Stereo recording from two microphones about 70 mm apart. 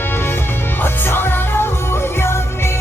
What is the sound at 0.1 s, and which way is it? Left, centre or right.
Music, left.